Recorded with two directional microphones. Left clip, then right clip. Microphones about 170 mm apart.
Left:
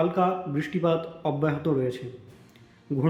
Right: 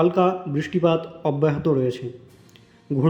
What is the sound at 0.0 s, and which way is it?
A man's voice, 20° right (ahead or behind).